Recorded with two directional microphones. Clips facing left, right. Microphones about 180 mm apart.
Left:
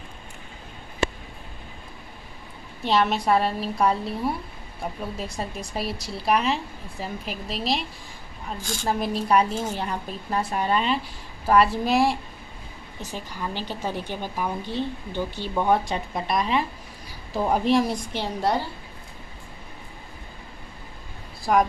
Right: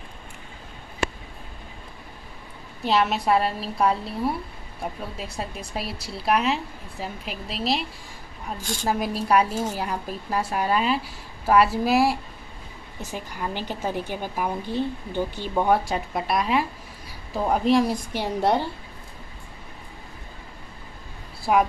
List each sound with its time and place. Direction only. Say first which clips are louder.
2.8 s a woman's voice: even; centre (ahead or behind)
8.8 s a woman's voice: even; 5° right (ahead or behind)
18.4 s a woman's voice: right 3 dB; 20° right (ahead or behind)